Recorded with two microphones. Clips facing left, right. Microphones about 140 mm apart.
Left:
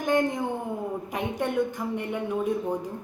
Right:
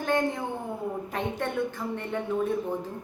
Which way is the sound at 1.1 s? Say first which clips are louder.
Left 4 dB; 15° left (ahead or behind).